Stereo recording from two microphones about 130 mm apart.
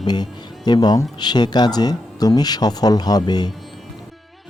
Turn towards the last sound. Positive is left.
turn(degrees=30)  # may be behind; listen again after turning